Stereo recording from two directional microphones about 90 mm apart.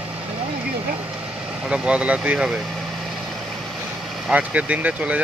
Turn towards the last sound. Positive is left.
turn(degrees=-15)  # may be behind; listen again after turning